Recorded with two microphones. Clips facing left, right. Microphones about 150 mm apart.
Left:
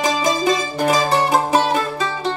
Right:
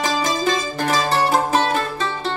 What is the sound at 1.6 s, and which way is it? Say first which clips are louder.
Music: left 2 dB; 20° left (ahead or behind).